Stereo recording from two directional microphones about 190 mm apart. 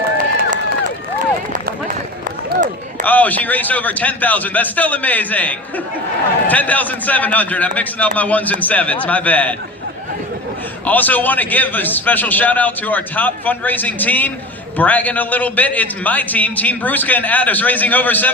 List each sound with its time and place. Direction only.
0.2 s run: 45° right (ahead or behind)
3.0 s a man's voice: 10° left (ahead or behind)
10.8 s a man's voice: 10° left (ahead or behind)